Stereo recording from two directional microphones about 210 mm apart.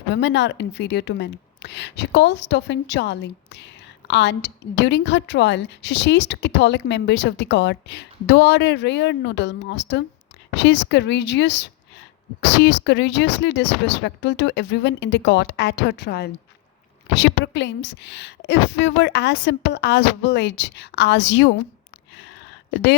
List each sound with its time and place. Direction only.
0.1 s a woman's voice: 55° left (ahead or behind)